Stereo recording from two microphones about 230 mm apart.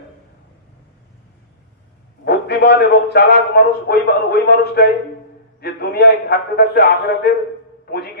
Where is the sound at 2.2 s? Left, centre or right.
Left.